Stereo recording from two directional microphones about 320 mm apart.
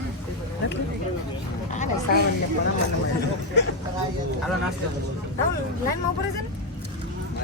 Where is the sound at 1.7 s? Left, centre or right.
Left.